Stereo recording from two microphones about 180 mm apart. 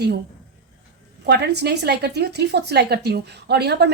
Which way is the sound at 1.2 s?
70° right (ahead or behind).